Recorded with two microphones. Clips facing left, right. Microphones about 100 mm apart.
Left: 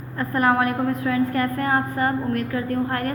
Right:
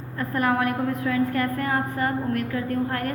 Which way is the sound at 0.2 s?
35° left (ahead or behind).